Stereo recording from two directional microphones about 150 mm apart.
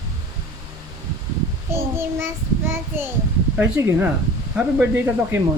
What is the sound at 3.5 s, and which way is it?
A child's voice, 10° right (ahead or behind).